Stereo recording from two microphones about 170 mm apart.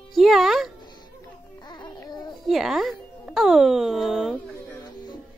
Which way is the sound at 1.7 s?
25° left (ahead or behind).